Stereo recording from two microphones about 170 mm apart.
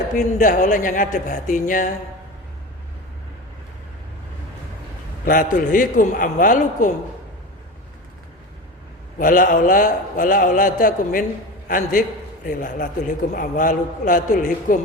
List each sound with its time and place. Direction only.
0.3 s a man's voice: 50° left (ahead or behind)
5.2 s a man's voice: 55° left (ahead or behind)
9.1 s a man's voice: 50° left (ahead or behind)